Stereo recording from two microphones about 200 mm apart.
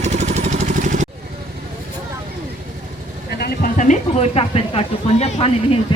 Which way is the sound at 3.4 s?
45° left (ahead or behind).